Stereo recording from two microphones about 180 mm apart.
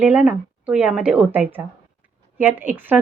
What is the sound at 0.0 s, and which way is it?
A woman's voice, 10° right (ahead or behind).